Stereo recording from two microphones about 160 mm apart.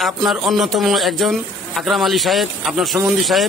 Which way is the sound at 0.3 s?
Centre (ahead or behind).